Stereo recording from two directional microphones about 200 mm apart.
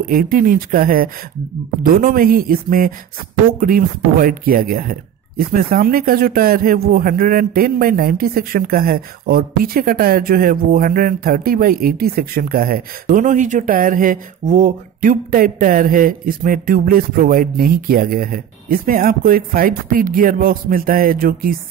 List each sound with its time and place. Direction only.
0.1 s speech: 45° right (ahead or behind)